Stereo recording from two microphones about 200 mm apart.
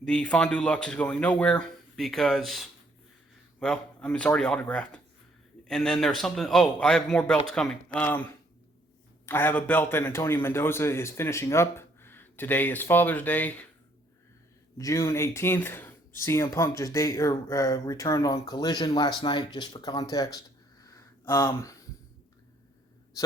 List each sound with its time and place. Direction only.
0.0 s speech: 5° left (ahead or behind)
14.8 s speech: 15° left (ahead or behind)
20.8 s a sound: 15° left (ahead or behind)